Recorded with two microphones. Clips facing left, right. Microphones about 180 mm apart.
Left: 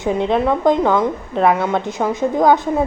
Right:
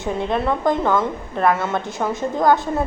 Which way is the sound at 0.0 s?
20° left (ahead or behind).